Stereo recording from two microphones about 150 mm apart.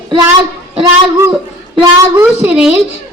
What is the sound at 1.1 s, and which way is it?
A child's voice, 15° right (ahead or behind).